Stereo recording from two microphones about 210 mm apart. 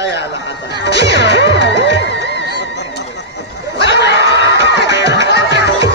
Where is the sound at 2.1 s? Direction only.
55° left (ahead or behind).